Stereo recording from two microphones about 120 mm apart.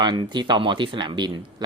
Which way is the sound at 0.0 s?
40° right (ahead or behind).